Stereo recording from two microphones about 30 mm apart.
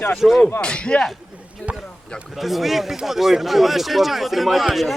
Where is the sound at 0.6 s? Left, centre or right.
Left.